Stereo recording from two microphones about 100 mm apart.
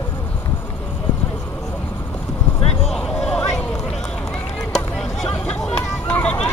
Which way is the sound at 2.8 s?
5° left (ahead or behind).